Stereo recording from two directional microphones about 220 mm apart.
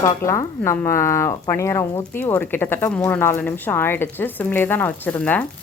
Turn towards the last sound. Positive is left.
turn(degrees=10)  # may be behind; listen again after turning